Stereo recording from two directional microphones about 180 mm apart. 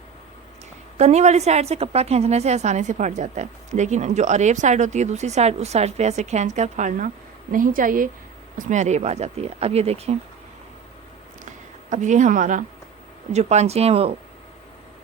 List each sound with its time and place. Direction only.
0.9 s a woman's voice: 40° right (ahead or behind)
11.4 s a sound: 45° right (ahead or behind)
13.3 s a woman's voice: 40° right (ahead or behind)